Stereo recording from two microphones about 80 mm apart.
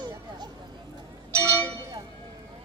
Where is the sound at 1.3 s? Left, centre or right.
Right.